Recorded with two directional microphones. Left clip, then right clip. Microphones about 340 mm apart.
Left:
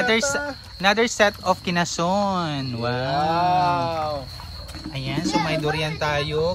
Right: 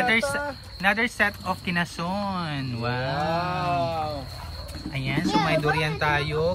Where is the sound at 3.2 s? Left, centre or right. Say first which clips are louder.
Left 9 dB; left.